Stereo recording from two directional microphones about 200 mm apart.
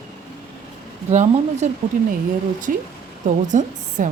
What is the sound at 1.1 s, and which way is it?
A woman's voice, 35° right (ahead or behind).